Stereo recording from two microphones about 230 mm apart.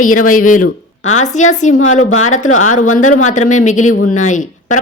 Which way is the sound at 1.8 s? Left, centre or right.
Left.